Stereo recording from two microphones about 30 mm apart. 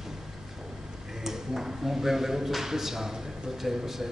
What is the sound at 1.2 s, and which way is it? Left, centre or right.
A man's voice, centre.